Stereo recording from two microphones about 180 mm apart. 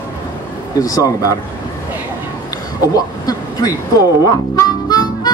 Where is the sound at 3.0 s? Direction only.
20° left (ahead or behind).